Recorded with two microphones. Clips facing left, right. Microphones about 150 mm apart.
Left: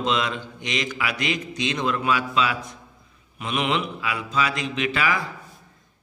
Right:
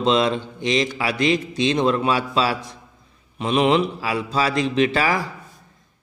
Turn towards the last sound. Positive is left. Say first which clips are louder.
# right 5 dB
turn(degrees=-35)  # may be behind; listen again after turning